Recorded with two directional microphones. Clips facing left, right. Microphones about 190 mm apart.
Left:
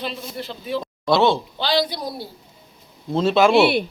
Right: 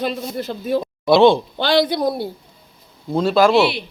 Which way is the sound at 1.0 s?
15° right (ahead or behind).